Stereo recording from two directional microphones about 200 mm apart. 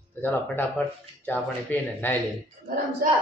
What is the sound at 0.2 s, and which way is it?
A man's voice, 10° left (ahead or behind).